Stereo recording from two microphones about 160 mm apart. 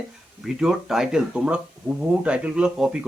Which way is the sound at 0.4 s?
5° right (ahead or behind).